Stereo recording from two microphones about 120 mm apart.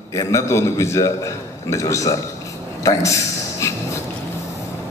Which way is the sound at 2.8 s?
25° left (ahead or behind).